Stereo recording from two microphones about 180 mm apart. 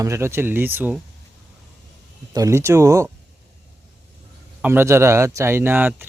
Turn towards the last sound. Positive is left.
turn(degrees=-10)  # may be behind; listen again after turning